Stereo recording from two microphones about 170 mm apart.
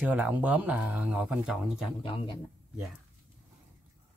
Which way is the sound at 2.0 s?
30° left (ahead or behind).